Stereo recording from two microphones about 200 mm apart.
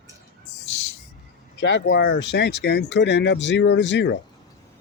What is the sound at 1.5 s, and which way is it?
Speech, 60° left (ahead or behind).